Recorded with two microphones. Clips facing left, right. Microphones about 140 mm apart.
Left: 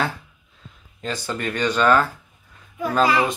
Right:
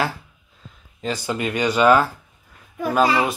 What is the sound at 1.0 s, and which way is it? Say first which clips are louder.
Speech: right 3 dB; 10° right (ahead or behind).